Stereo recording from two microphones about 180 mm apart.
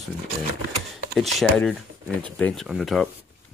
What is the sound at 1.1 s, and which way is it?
A man's voice, centre (ahead or behind).